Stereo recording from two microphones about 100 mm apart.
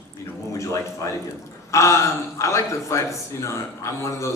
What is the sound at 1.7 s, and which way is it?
A man's voice, 30° left (ahead or behind).